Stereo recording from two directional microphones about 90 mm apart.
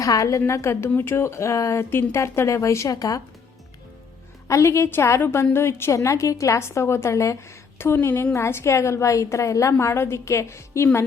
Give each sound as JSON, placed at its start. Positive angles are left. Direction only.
{"t": 0.0, "sound": "a woman's voice", "side_deg": 40}
{"t": 4.4, "sound": "a woman's voice", "side_deg": 35}